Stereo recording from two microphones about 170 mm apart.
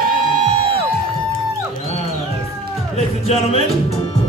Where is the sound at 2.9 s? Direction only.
35° left (ahead or behind).